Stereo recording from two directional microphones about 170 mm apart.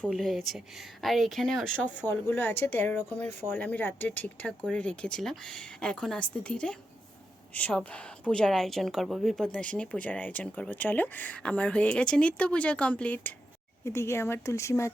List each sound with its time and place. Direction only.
0.0 s a woman's voice: centre (ahead or behind)